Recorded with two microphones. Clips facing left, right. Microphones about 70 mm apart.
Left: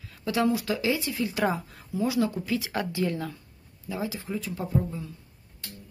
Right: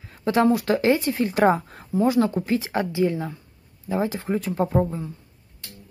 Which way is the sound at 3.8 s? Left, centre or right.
Right.